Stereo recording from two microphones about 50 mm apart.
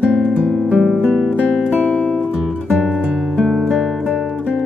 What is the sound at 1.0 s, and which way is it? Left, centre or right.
Music, centre.